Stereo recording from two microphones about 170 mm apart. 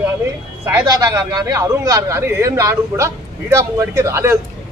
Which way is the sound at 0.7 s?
20° right (ahead or behind).